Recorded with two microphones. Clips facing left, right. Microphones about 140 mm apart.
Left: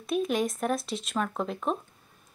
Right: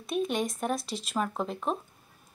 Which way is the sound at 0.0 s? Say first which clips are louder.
Left 2 dB; centre (ahead or behind).